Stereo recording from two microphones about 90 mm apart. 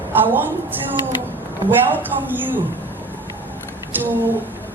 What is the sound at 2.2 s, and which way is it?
Speech, 20° right (ahead or behind).